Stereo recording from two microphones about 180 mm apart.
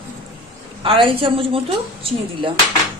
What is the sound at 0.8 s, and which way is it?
Speech, 30° right (ahead or behind).